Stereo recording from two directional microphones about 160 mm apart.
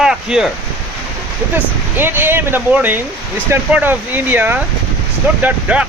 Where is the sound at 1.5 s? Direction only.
15° right (ahead or behind).